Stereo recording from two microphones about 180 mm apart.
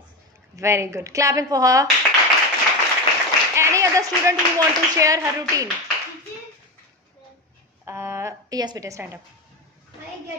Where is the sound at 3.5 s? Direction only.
15° right (ahead or behind).